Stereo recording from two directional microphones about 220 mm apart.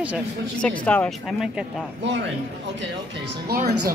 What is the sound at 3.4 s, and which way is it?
Speech, 40° right (ahead or behind).